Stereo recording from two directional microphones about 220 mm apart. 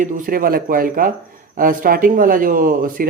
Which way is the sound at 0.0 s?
40° right (ahead or behind).